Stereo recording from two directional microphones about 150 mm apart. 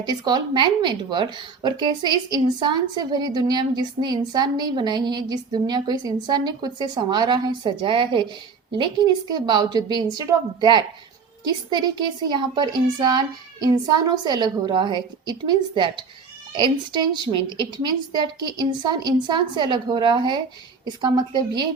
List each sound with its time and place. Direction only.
0.0 s speech: 30° right (ahead or behind)